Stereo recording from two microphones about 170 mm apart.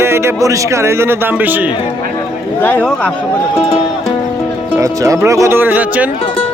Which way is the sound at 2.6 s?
10° left (ahead or behind).